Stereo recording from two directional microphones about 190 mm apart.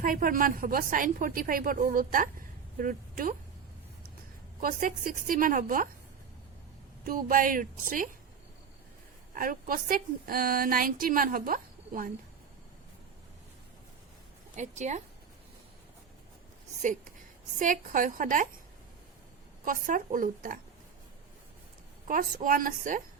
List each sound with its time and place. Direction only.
0.0 s a woman's voice: 50° right (ahead or behind)
4.6 s a woman's voice: 45° right (ahead or behind)
7.0 s a woman's voice: 45° right (ahead or behind)
9.3 s a woman's voice: 45° right (ahead or behind)
14.5 s speech: 40° right (ahead or behind)
17.6 s a woman's voice: 45° right (ahead or behind)
19.6 s a woman's voice: 45° right (ahead or behind)
22.0 s a woman's voice: 45° right (ahead or behind)